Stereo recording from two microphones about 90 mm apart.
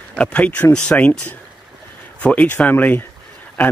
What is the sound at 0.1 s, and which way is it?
Speech, 10° left (ahead or behind).